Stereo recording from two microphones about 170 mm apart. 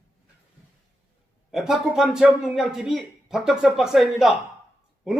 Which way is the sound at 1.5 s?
Centre (ahead or behind).